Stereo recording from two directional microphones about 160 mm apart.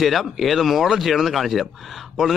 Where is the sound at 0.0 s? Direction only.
Centre (ahead or behind).